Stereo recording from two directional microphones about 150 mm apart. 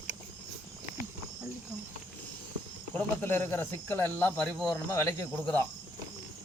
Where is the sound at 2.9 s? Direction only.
10° left (ahead or behind).